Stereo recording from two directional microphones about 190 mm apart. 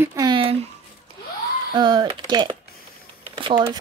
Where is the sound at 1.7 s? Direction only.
25° right (ahead or behind).